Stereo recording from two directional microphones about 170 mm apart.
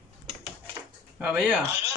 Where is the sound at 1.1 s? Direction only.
5° right (ahead or behind).